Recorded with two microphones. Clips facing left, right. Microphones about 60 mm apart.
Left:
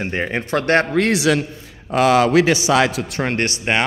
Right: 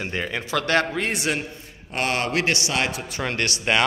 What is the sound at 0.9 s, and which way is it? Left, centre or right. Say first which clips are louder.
Speech: left 9 dB; left.